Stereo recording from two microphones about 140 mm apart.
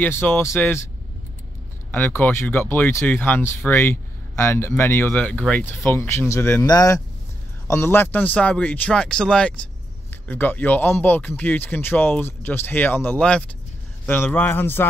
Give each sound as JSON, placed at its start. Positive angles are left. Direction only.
{"t": 0.0, "sound": "speech", "side_deg": 15}
{"t": 1.9, "sound": "speech", "side_deg": 15}